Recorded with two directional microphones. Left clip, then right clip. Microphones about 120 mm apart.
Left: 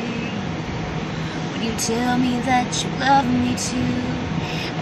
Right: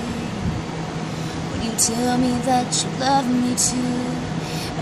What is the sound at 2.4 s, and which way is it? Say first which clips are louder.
Speech: left 1 dB; 30° right (ahead or behind).